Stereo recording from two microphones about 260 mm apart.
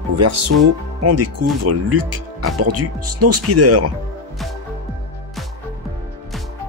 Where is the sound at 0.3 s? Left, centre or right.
Right.